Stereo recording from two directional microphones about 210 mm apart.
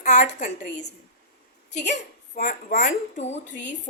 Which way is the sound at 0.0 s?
35° left (ahead or behind).